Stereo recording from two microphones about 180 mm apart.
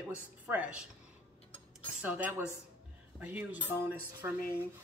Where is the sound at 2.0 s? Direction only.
10° right (ahead or behind).